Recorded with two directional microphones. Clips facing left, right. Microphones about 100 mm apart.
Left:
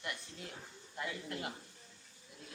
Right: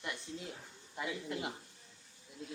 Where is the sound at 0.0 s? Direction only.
20° right (ahead or behind).